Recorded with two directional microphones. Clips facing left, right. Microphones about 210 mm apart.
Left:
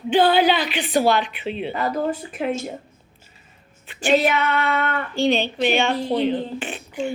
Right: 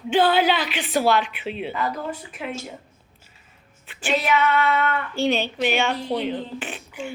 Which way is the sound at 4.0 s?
40° left (ahead or behind).